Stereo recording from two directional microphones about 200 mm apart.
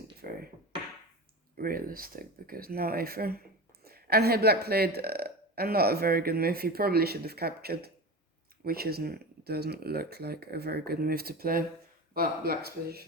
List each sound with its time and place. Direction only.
0.2 s music: 45° right (ahead or behind)
1.5 s speech: 45° right (ahead or behind)